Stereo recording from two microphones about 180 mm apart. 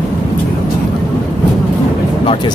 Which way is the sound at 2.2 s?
30° left (ahead or behind).